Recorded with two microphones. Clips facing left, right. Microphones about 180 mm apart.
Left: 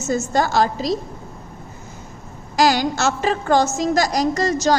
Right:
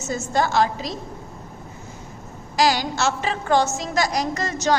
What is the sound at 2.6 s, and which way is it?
A woman's voice, 45° left (ahead or behind).